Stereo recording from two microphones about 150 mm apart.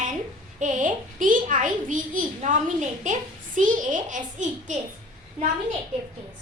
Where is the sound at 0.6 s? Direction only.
60° right (ahead or behind).